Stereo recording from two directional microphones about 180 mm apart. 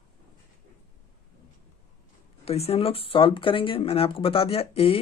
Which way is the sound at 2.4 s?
35° left (ahead or behind).